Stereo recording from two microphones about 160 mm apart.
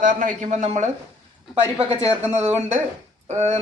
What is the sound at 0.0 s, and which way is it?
Speech, 55° right (ahead or behind).